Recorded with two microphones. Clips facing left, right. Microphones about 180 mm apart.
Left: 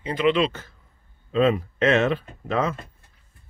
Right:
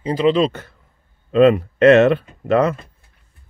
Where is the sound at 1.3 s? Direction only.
65° right (ahead or behind).